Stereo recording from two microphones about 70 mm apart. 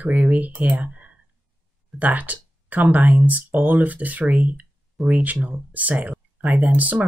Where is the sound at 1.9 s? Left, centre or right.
Right.